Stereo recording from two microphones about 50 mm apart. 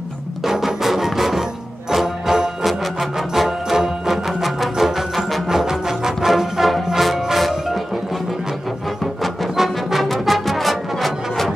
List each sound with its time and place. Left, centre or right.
0.4 s music: centre
2.6 s music: centre